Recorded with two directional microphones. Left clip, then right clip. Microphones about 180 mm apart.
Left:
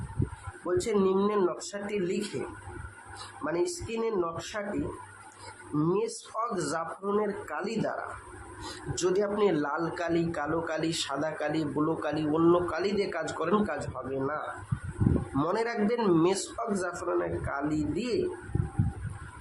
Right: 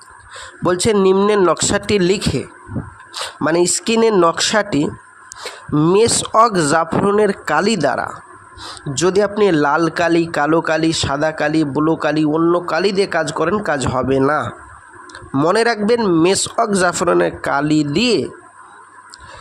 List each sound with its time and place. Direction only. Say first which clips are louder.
0.9 s a man's voice: right 14 dB; 45° right (ahead or behind)
3.4 s speech: right 15 dB; 55° right (ahead or behind)
5.8 s a man's voice: right 16 dB; 55° right (ahead or behind)
12.4 s a man's voice: right 5 dB; 30° right (ahead or behind)
12.7 s a man's voice: right 14 dB; 45° right (ahead or behind)
16.0 s a man's voice: right 10 dB; 35° right (ahead or behind)
16.2 s a man's voice: right 13 dB; 50° right (ahead or behind)